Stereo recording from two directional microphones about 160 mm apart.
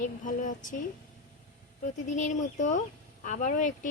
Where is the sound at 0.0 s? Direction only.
50° left (ahead or behind).